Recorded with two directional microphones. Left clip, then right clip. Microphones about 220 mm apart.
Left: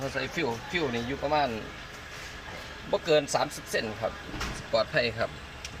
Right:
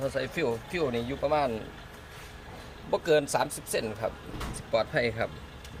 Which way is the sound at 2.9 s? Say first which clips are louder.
Even; 10° right (ahead or behind).